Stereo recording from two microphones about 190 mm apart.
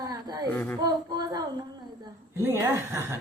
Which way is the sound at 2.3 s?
15° right (ahead or behind).